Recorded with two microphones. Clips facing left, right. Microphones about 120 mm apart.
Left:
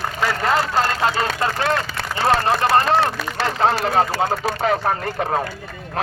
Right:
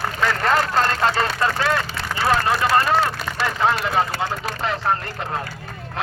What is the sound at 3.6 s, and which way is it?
Speech, 40° left (ahead or behind).